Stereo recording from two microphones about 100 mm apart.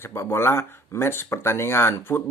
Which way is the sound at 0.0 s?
25° left (ahead or behind).